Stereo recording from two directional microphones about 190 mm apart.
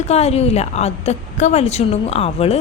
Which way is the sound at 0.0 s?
35° left (ahead or behind).